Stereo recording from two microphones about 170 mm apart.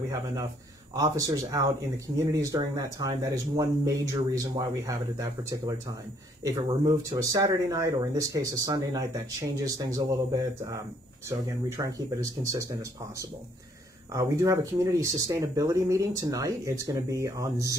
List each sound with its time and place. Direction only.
0.1 s speech: 20° right (ahead or behind)
14.1 s speech: 15° right (ahead or behind)